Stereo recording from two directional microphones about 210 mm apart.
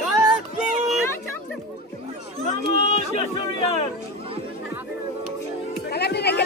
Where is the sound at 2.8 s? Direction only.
30° left (ahead or behind).